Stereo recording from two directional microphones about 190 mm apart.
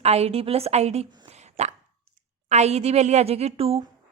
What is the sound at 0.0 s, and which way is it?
A woman's voice, 35° right (ahead or behind).